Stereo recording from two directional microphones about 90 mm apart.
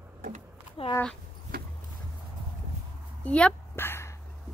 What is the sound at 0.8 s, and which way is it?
Speech, 80° left.